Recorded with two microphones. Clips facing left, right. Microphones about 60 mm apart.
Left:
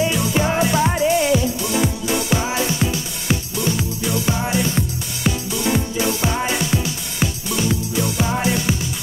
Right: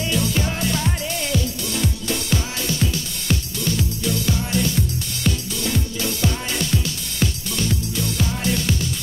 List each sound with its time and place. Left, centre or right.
0.0 s music: centre